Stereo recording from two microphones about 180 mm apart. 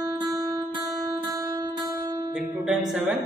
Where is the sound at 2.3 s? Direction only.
5° right (ahead or behind).